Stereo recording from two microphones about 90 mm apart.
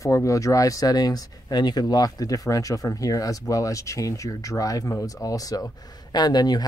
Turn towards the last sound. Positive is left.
turn(degrees=50)  # may be behind; listen again after turning